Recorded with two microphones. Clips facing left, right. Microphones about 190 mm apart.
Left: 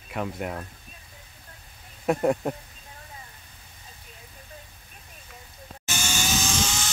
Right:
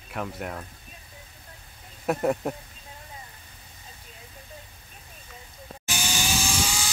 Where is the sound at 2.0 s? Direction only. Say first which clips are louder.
Left 2 dB; centre (ahead or behind).